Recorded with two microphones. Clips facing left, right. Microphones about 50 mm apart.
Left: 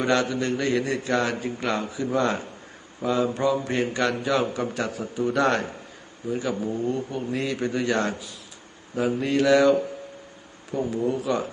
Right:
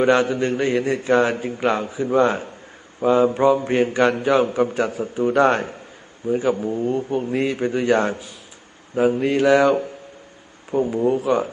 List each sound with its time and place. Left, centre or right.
0.0 s a man's voice: right
10.8 s a man's voice: right